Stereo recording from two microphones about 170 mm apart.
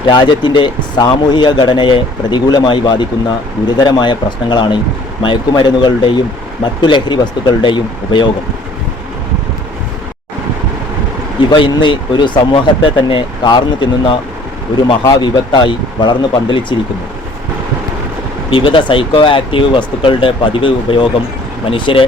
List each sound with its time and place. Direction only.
0.1 s a man's voice: 25° left (ahead or behind)
11.3 s a man's voice: 30° left (ahead or behind)
18.5 s speech: 30° left (ahead or behind)